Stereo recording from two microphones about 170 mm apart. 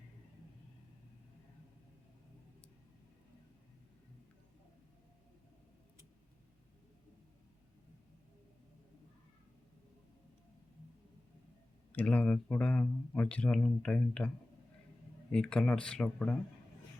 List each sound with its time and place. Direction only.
11.9 s speech: 10° left (ahead or behind)
15.3 s speech: 5° left (ahead or behind)